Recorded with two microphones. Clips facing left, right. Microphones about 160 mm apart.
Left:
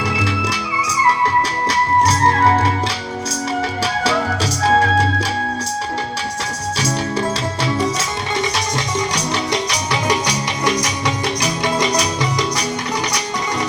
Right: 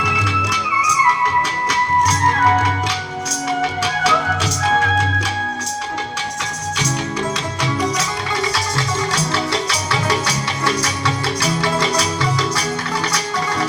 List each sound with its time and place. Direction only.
0.0 s music: 30° left (ahead or behind)
4.0 s music: 35° left (ahead or behind)
7.6 s music: 25° left (ahead or behind)